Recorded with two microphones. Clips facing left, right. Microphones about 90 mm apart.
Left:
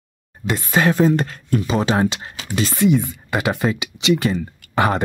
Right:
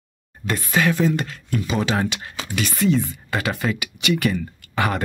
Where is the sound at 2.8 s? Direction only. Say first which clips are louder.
Left 3 dB; 15° left (ahead or behind).